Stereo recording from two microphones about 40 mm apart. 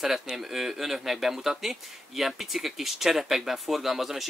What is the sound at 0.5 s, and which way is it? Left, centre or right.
Speech, centre.